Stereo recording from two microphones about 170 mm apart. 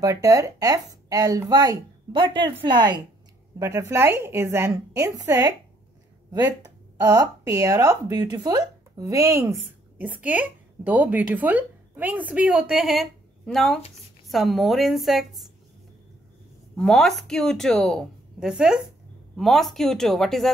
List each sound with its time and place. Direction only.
0.0 s a woman's voice: 20° right (ahead or behind); by 15.4 s centre (ahead or behind)
16.7 s speech: centre (ahead or behind)